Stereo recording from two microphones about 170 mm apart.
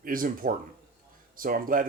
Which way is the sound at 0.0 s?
55° right (ahead or behind).